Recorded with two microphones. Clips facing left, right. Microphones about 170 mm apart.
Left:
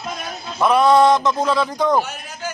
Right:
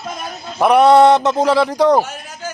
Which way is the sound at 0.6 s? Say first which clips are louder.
Right 4 dB; 70° right (ahead or behind).